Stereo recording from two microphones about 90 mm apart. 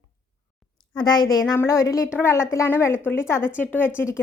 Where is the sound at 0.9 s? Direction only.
50° left (ahead or behind).